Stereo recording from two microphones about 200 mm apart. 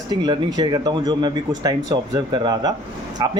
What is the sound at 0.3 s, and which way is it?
Speech, 20° right (ahead or behind).